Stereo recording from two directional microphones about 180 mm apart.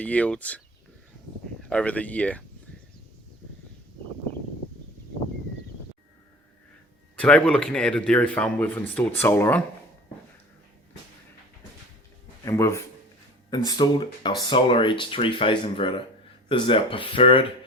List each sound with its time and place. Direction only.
0.0 s speech: 10° left (ahead or behind)
1.6 s speech: 5° left (ahead or behind)
7.2 s speech: 5° left (ahead or behind)
12.5 s speech: 15° left (ahead or behind)